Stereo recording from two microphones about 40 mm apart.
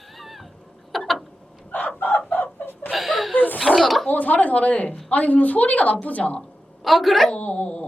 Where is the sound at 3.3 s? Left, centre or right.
Left.